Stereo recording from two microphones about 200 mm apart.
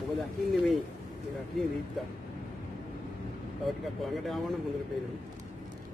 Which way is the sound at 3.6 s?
Centre (ahead or behind).